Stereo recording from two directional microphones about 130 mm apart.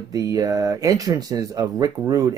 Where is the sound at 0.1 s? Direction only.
25° right (ahead or behind).